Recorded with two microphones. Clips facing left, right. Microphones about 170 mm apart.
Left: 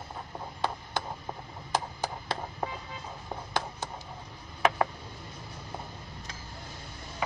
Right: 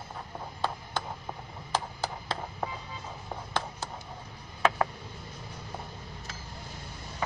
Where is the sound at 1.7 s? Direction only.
15° left (ahead or behind).